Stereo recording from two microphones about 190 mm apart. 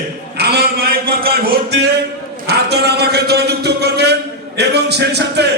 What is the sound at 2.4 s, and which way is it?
A man's voice, 60° right (ahead or behind).